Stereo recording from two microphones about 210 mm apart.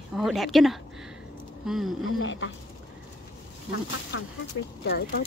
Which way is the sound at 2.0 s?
65° left (ahead or behind).